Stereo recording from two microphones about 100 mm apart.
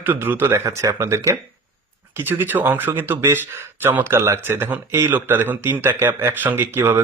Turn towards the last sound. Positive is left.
turn(degrees=-25)  # may be behind; listen again after turning